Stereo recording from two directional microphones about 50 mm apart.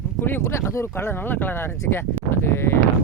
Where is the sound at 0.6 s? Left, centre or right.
Left.